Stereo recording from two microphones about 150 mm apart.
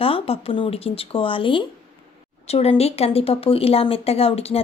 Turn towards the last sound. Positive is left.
turn(degrees=40)  # may be behind; listen again after turning